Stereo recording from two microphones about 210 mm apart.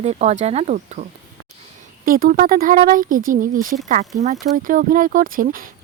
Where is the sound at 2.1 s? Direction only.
45° right (ahead or behind).